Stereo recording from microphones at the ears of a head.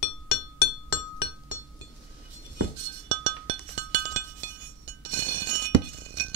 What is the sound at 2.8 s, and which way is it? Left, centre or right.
Chink, right.